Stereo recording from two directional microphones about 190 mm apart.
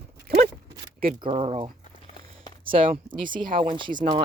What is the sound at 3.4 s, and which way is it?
Speech, 45° right (ahead or behind).